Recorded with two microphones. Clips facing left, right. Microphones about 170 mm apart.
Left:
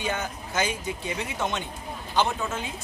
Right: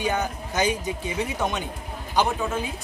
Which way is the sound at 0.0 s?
15° right (ahead or behind).